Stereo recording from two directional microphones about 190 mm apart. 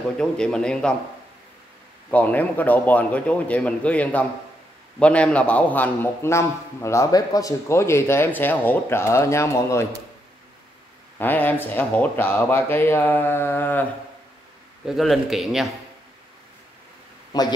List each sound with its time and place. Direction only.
0.2 s a man's voice: 5° left (ahead or behind)
2.0 s a man's voice: 10° left (ahead or behind)
11.1 s a man's voice: 10° left (ahead or behind)
14.9 s a man's voice: centre (ahead or behind)
17.3 s a sound: 20° left (ahead or behind)